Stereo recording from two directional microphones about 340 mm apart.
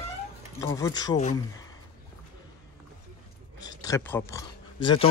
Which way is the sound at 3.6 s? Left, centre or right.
Centre.